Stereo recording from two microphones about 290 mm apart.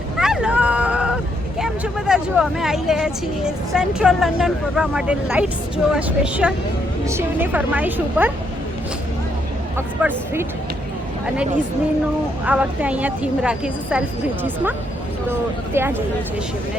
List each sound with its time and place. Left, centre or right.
0.2 s a woman's voice: centre
9.7 s speech: centre
12.5 s a woman's voice: centre